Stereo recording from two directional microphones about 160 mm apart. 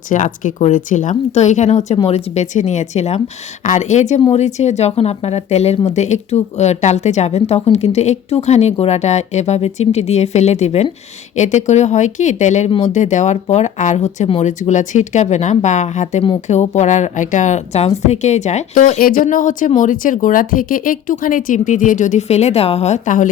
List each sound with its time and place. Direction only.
0.1 s speech: 50° left (ahead or behind)
18.9 s speech: 65° left (ahead or behind)